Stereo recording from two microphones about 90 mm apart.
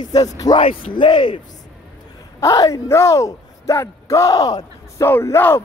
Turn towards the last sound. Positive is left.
turn(degrees=25)  # may be behind; listen again after turning